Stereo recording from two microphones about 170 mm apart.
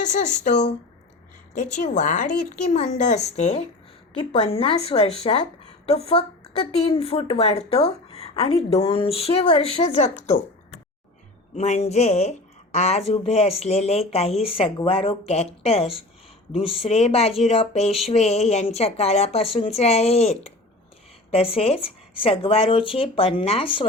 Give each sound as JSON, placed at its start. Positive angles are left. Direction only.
{"t": 1.7, "sound": "a woman's voice", "side_deg": 45}
{"t": 11.5, "sound": "speech", "side_deg": 40}